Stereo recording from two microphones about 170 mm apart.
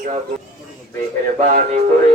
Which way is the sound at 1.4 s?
45° right (ahead or behind).